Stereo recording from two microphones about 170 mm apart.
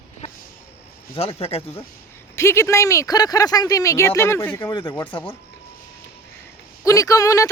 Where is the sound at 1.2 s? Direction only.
35° left (ahead or behind).